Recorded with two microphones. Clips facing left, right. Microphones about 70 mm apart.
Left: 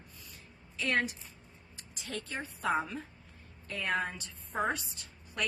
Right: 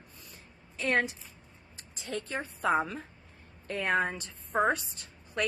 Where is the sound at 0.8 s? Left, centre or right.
Right.